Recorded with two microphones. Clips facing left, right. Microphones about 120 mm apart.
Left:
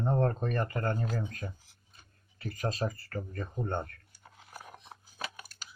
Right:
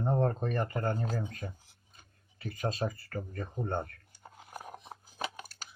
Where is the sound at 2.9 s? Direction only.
15° right (ahead or behind).